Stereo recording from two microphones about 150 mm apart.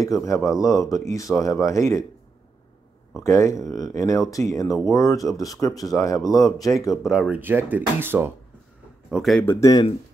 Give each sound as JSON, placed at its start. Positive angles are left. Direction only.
{"t": 0.0, "sound": "speech", "side_deg": 20}
{"t": 3.3, "sound": "speech", "side_deg": 20}
{"t": 7.0, "sound": "speech", "side_deg": -5}
{"t": 9.1, "sound": "speech", "side_deg": 0}
{"t": 9.4, "sound": "speech", "side_deg": 20}